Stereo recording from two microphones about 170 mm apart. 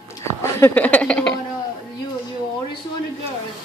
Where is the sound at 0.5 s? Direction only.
10° left (ahead or behind).